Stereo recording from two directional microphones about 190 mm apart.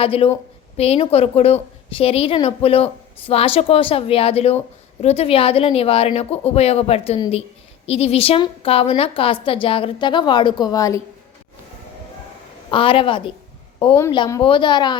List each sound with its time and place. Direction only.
0.0 s a woman's voice: 30° left (ahead or behind)
12.7 s a woman's voice: 30° left (ahead or behind)